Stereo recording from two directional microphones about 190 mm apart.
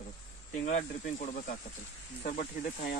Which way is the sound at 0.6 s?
40° left (ahead or behind).